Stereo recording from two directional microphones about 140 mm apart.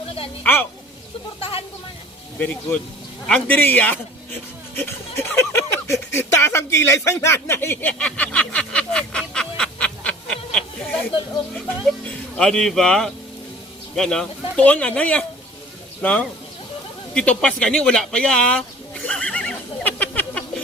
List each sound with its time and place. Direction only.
0.4 s speech: 15° left (ahead or behind)
1.4 s speech: 45° left (ahead or behind)
2.4 s speech: 10° left (ahead or behind)
19.0 s a sound: 10° left (ahead or behind)